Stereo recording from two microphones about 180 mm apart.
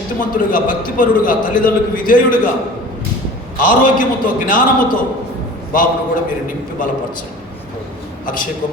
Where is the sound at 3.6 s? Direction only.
50° left (ahead or behind).